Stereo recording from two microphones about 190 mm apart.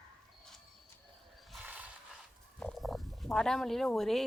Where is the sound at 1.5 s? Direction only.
10° right (ahead or behind).